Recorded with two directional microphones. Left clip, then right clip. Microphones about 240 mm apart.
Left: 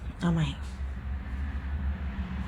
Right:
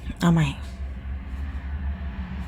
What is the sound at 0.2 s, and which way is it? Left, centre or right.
Speech, right.